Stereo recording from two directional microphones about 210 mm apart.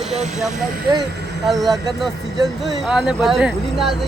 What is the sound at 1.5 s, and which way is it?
Speech, centre (ahead or behind).